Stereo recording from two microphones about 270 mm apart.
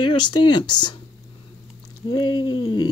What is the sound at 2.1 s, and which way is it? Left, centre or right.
Speech, left.